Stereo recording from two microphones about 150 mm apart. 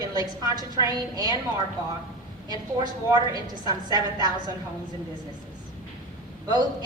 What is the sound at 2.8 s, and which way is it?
A woman's voice, 30° right (ahead or behind).